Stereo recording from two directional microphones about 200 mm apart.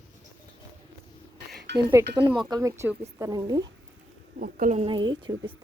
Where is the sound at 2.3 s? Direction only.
20° right (ahead or behind).